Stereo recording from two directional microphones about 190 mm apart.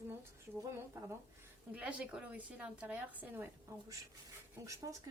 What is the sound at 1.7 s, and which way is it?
A woman's voice, 5° right (ahead or behind).